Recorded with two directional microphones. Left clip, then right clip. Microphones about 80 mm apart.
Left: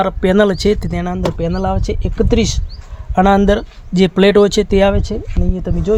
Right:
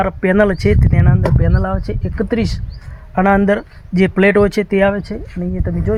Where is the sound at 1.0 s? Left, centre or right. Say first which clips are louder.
Even; left.